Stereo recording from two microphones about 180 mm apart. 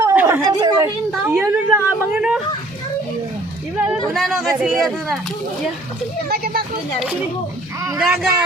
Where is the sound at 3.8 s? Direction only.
Centre (ahead or behind).